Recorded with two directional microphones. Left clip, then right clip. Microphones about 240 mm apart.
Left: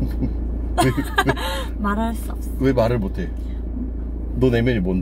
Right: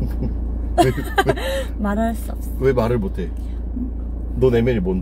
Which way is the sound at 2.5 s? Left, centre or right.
Centre.